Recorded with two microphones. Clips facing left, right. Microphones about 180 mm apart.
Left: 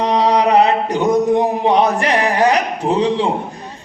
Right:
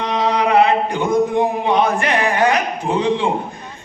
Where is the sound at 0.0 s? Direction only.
35° left (ahead or behind).